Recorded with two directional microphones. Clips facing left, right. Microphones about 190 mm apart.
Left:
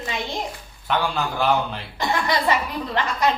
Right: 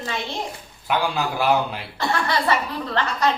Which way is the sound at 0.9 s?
10° right (ahead or behind).